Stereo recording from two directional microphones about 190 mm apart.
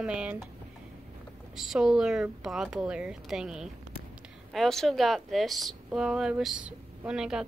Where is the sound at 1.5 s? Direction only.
Centre (ahead or behind).